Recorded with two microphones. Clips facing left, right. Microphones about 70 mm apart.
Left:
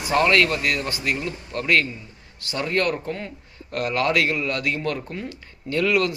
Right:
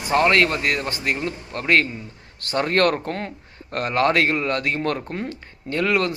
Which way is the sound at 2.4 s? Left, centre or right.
Right.